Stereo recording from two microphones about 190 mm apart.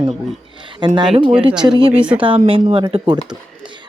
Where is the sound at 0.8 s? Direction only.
25° right (ahead or behind).